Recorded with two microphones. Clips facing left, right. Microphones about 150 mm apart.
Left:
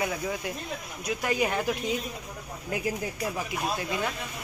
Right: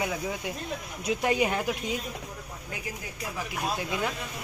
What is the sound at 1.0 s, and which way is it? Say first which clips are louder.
Speech: right 2 dB; 25° right (ahead or behind).